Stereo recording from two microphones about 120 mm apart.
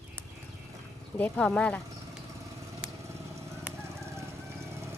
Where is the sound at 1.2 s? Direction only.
10° left (ahead or behind).